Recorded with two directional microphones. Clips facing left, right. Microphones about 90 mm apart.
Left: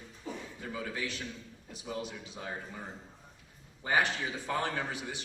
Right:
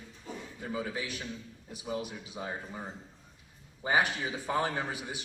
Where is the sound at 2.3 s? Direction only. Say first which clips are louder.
Right 3 dB; 20° right (ahead or behind).